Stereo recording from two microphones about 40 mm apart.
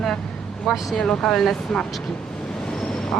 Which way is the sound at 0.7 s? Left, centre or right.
Centre.